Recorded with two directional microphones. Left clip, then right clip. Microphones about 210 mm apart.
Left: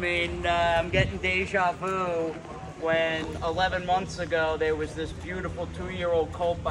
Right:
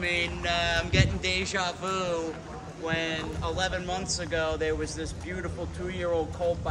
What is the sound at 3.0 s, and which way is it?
Speech, 25° left (ahead or behind).